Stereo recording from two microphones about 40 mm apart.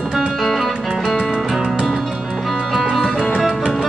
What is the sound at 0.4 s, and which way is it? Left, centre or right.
Music, centre.